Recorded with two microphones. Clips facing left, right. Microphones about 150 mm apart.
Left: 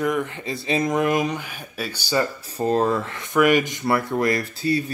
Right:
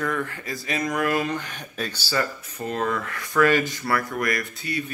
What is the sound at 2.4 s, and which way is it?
Speech, 35° left (ahead or behind).